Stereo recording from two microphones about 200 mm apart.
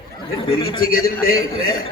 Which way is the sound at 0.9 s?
45° left (ahead or behind).